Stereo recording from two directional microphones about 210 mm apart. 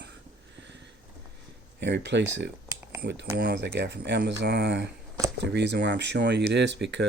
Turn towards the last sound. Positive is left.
turn(degrees=-55)  # may be behind; listen again after turning